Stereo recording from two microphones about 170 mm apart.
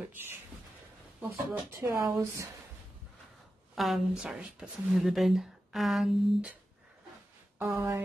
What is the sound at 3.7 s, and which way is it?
A woman's voice, centre (ahead or behind).